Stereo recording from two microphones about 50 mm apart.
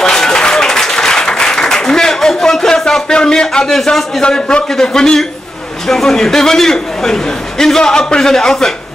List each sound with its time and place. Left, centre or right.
0.0 s applause: centre
2.8 s a sound: centre
3.6 s a man's voice: centre
4.2 s a man's voice: centre